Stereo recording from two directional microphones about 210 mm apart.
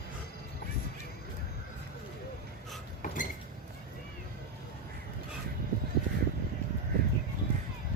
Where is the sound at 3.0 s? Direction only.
40° left (ahead or behind).